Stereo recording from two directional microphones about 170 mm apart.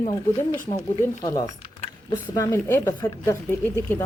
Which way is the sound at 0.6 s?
20° left (ahead or behind).